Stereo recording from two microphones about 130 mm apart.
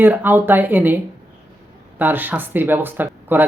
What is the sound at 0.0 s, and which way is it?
Speech, 15° right (ahead or behind).